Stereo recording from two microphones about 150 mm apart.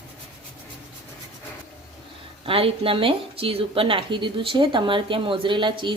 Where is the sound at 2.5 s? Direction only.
40° right (ahead or behind).